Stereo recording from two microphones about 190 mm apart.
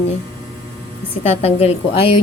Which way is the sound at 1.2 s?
35° left (ahead or behind).